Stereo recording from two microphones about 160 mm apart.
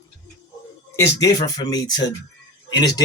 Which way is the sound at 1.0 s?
25° left (ahead or behind).